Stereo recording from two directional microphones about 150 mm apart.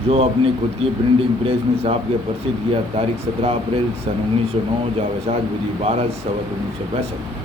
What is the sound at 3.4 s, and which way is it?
A man's voice, 40° right (ahead or behind).